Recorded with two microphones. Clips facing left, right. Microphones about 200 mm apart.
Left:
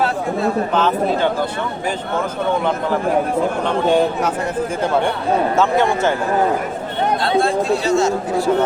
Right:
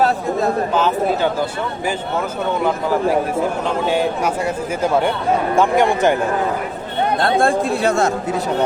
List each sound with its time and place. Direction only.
0.0 s chatter: 40° right (ahead or behind)
0.7 s speech: 10° right (ahead or behind)
3.8 s speech: 10° right (ahead or behind)
5.5 s speech: 15° right (ahead or behind)
7.2 s speech: 50° right (ahead or behind)